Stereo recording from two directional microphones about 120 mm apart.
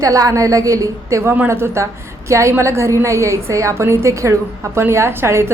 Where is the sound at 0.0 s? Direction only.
30° right (ahead or behind).